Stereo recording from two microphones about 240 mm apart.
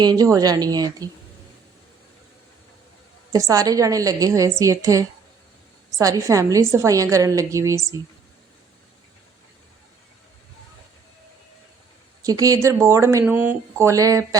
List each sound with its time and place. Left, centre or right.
0.0 s a woman's voice: centre
3.3 s a woman's voice: centre
12.2 s a woman's voice: centre